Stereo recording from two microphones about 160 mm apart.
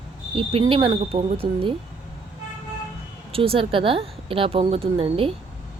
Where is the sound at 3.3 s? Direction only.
35° right (ahead or behind).